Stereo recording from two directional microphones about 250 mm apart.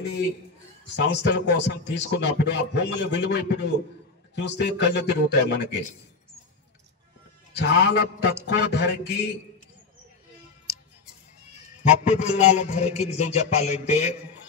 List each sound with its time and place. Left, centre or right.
0.8 s speech: left
7.5 s speech: left
11.8 s a man's voice: left